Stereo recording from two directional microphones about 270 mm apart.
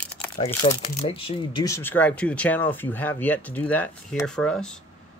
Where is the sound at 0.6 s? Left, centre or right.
Left; by 4.7 s centre.